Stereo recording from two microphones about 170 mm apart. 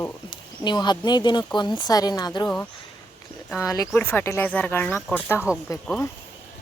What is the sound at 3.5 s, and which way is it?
Speech, 20° left (ahead or behind).